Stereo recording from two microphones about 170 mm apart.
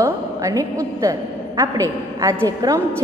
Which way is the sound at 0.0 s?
20° right (ahead or behind).